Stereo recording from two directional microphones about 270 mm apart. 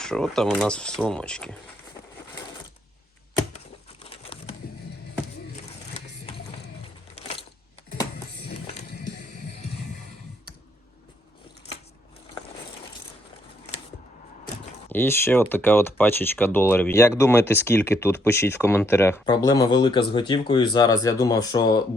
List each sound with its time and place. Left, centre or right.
0.0 s speech: centre
4.0 s a sound: left
7.2 s coin: left
14.8 s speech: centre